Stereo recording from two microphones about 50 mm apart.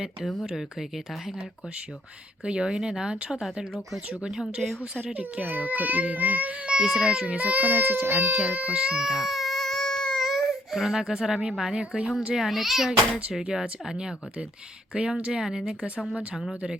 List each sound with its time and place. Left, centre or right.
0.5 s speech: centre
2.4 s speech: centre
5.1 s a child's voice: right; by 7.3 s centre
7.3 s a child's voice: right
8.4 s baby cry: right; by 10.2 s centre
10.2 s speech: centre
12.3 s a child's voice: centre